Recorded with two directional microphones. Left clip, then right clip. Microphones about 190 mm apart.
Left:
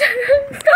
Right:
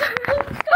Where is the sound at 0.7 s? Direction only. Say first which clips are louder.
Left 5 dB; 40° left (ahead or behind).